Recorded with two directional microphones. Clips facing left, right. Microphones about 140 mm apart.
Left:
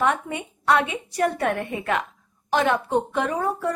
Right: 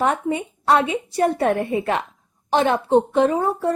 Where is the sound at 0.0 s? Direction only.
35° right (ahead or behind).